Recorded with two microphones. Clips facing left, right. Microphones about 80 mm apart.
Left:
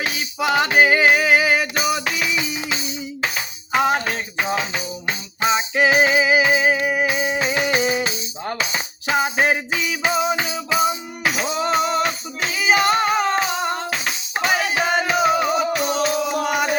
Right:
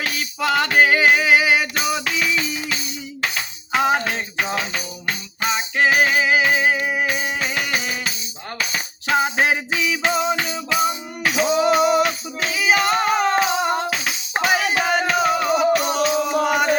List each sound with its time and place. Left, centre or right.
0.0 s music: centre
3.3 s music: centre; by 8.8 s left
9.0 s a sound: centre
10.3 s music: centre